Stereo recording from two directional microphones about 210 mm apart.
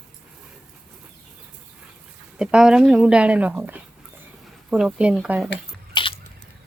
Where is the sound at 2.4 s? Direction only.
5° right (ahead or behind).